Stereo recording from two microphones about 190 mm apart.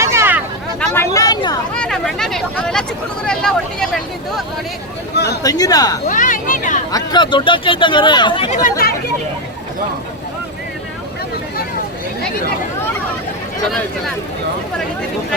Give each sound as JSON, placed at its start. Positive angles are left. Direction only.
{"t": 0.0, "sound": "vehicle", "side_deg": -15}
{"t": 0.8, "sound": "a sound", "side_deg": 15}
{"t": 1.7, "sound": "a sound", "side_deg": 5}
{"t": 3.2, "sound": "vehicle", "side_deg": 5}
{"t": 5.1, "sound": "speech", "side_deg": 60}
{"t": 5.4, "sound": "speech", "side_deg": 20}
{"t": 6.1, "sound": "speech", "side_deg": 45}
{"t": 6.9, "sound": "speech", "side_deg": 25}
{"t": 8.4, "sound": "speech", "side_deg": 40}